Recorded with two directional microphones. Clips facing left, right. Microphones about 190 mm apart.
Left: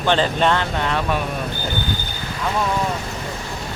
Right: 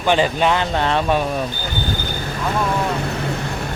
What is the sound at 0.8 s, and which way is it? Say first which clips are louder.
Speech: right 4 dB; 30° right (ahead or behind).